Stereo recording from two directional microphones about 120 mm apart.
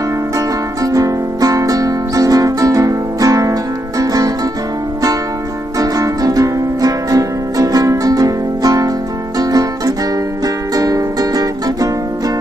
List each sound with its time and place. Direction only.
0.8 s music: 30° right (ahead or behind)
5.8 s music: 30° right (ahead or behind)